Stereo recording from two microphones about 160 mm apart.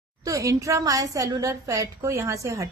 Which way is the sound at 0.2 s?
20° right (ahead or behind).